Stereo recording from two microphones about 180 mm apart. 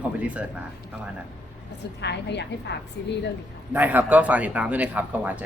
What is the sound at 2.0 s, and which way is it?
Speech, 70° left (ahead or behind).